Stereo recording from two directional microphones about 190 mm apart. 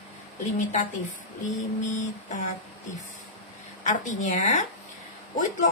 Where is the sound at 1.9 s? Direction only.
40° left (ahead or behind).